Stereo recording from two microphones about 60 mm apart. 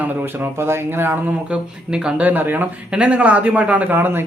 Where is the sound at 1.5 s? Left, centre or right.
Centre.